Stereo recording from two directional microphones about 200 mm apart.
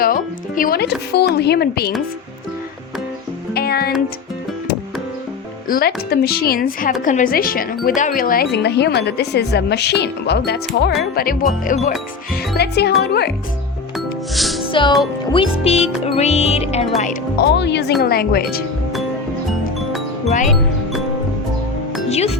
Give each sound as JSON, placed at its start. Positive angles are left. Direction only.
{"t": 0.0, "sound": "speech", "side_deg": 45}
{"t": 3.5, "sound": "music", "side_deg": 50}
{"t": 5.6, "sound": "speech", "side_deg": 50}
{"t": 8.5, "sound": "a woman's voice", "side_deg": 55}
{"t": 13.9, "sound": "music", "side_deg": 0}
{"t": 14.7, "sound": "speech", "side_deg": 25}
{"t": 15.3, "sound": "music", "side_deg": 25}
{"t": 17.0, "sound": "a woman's voice", "side_deg": 45}
{"t": 20.2, "sound": "music", "side_deg": 40}
{"t": 22.1, "sound": "music", "side_deg": 30}